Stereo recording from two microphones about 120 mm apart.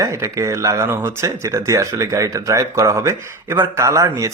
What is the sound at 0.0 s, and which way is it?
Speech, 25° right (ahead or behind).